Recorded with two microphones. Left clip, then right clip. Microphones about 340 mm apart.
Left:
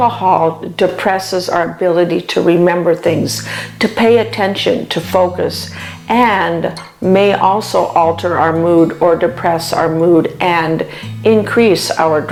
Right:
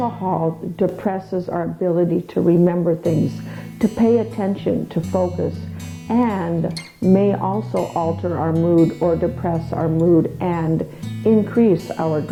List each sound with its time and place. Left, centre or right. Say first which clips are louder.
0.0 s speech: left 11 dB; centre
0.8 s speech: left 9 dB; centre
5.1 s speech: left 8 dB; centre
6.1 s speech: left 10 dB; centre
7.4 s speech: left 10 dB; centre
10.4 s speech: left 9 dB; centre